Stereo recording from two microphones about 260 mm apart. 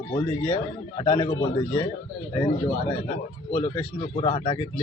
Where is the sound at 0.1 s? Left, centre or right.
Left.